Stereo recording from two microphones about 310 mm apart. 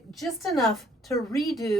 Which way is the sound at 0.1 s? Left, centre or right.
Centre.